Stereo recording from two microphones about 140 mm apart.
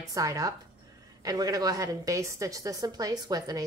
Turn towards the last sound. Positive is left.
turn(degrees=-25)  # may be behind; listen again after turning